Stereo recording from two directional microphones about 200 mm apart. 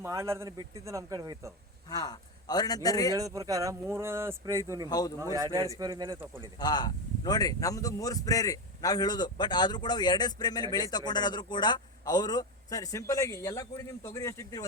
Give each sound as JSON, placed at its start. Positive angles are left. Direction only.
{"t": 0.0, "sound": "speech", "side_deg": -15}
{"t": 1.9, "sound": "speech", "side_deg": 20}
{"t": 3.2, "sound": "speech", "side_deg": -15}
{"t": 4.9, "sound": "speech", "side_deg": 20}
{"t": 5.2, "sound": "speech", "side_deg": -15}
{"t": 6.6, "sound": "speech", "side_deg": 20}